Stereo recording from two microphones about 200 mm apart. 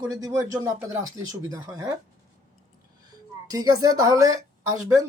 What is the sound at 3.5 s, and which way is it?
Speech, 20° right (ahead or behind).